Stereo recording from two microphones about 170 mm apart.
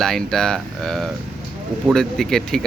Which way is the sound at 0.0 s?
Centre (ahead or behind).